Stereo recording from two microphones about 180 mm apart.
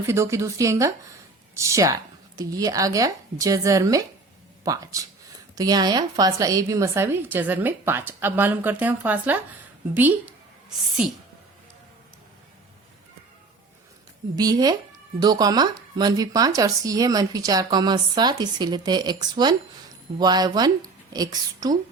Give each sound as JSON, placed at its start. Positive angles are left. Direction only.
{"t": 0.0, "sound": "a woman's voice", "side_deg": -15}
{"t": 14.3, "sound": "speech", "side_deg": -20}